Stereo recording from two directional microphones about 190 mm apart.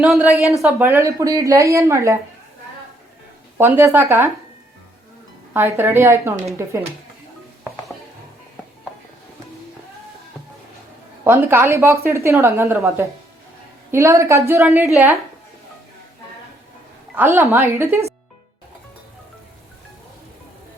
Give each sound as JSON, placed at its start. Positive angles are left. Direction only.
{"t": 0.0, "sound": "speech", "side_deg": -5}
{"t": 0.3, "sound": "speech", "side_deg": 15}
{"t": 0.6, "sound": "a woman's voice", "side_deg": -10}
{"t": 3.6, "sound": "a woman's voice", "side_deg": -10}
{"t": 5.5, "sound": "a woman's voice", "side_deg": -10}
{"t": 11.2, "sound": "a woman's voice", "side_deg": -15}
{"t": 17.2, "sound": "a woman's voice", "side_deg": -10}